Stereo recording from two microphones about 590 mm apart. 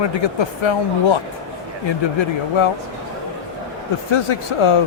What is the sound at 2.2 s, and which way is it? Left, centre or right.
Speech, left.